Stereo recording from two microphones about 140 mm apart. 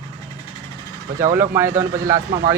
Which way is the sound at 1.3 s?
20° right (ahead or behind).